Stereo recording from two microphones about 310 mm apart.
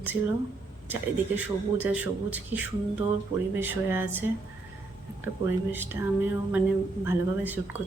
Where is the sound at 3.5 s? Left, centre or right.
Centre.